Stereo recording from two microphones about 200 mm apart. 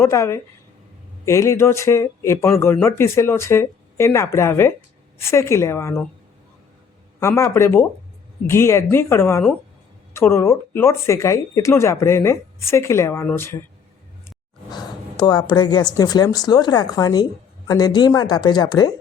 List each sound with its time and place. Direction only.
0.0 s speech: 15° left (ahead or behind)
7.2 s speech: 15° left (ahead or behind)
14.3 s a sound: 20° left (ahead or behind)
16.0 s speech: 20° left (ahead or behind)